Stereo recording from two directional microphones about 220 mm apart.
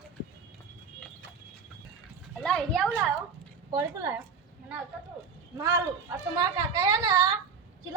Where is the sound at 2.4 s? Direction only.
Centre (ahead or behind).